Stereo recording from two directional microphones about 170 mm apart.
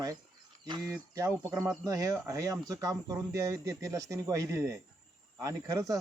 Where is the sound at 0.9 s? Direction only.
15° right (ahead or behind).